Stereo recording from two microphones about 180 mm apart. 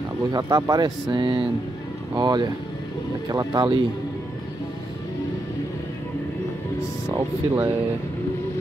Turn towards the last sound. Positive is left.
turn(degrees=-15)  # may be behind; listen again after turning